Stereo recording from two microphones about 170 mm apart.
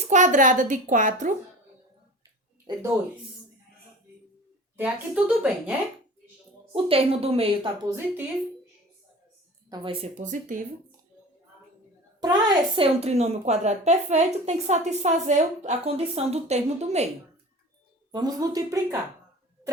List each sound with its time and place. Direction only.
0.0 s a woman's voice: 45° right (ahead or behind)
4.8 s speech: 5° right (ahead or behind)
6.7 s a woman's voice: 35° right (ahead or behind)
7.9 s speech: 15° right (ahead or behind)
9.6 s speech: 20° right (ahead or behind)
9.9 s a woman's voice: 35° right (ahead or behind)
10.2 s a woman's voice: 50° right (ahead or behind)
12.2 s a woman's voice: 25° right (ahead or behind)
18.1 s speech: 20° right (ahead or behind)